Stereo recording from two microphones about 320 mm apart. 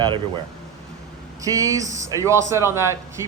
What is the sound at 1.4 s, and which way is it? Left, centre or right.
A man's voice, centre.